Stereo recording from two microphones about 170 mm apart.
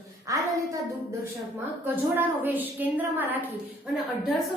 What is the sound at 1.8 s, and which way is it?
A woman's voice, 10° right (ahead or behind).